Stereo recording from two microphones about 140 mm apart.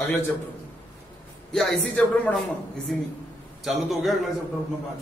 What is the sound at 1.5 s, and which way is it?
Speech, 5° left (ahead or behind).